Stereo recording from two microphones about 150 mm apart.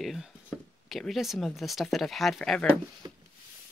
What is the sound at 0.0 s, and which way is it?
Chopping, centre (ahead or behind).